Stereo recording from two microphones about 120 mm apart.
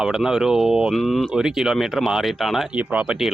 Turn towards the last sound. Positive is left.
turn(degrees=-5)  # may be behind; listen again after turning